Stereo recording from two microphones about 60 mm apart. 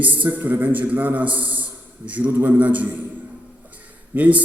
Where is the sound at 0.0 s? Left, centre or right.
Right.